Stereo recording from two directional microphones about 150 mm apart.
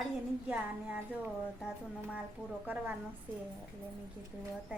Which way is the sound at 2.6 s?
10° right (ahead or behind).